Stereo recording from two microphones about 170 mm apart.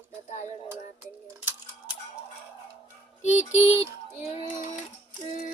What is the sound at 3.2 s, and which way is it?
Speech, 45° left (ahead or behind).